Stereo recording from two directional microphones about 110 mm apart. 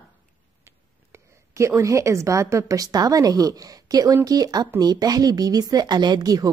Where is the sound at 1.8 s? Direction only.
30° right (ahead or behind).